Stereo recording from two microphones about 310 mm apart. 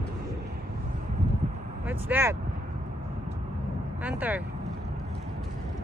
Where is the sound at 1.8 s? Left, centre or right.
Centre.